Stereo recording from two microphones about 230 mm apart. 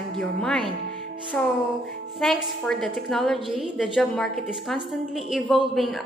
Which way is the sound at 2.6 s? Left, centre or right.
Centre.